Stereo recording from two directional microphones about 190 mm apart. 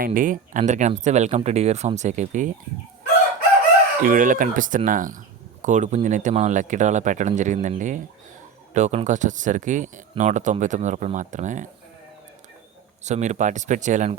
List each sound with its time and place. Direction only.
0.0 s speech: 45° right (ahead or behind)
4.0 s speech: 45° right (ahead or behind)
13.1 s speech: 40° right (ahead or behind)